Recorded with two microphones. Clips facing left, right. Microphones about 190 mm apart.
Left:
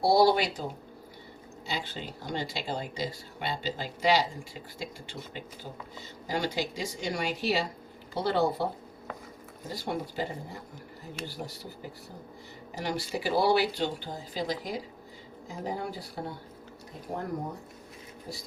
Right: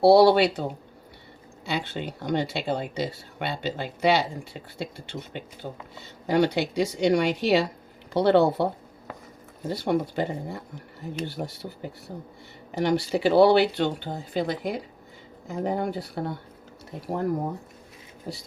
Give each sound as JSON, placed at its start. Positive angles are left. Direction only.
{"t": 0.0, "sound": "a woman's voice", "side_deg": -65}
{"t": 9.6, "sound": "speech", "side_deg": -65}
{"t": 12.7, "sound": "speech", "side_deg": -70}